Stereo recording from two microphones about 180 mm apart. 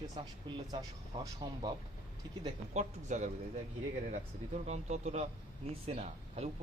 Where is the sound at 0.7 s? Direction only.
20° right (ahead or behind).